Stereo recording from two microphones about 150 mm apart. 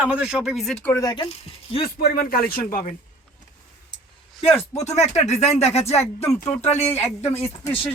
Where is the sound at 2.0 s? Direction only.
85° left.